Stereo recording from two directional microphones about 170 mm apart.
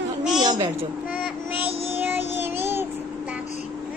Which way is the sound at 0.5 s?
30° right (ahead or behind).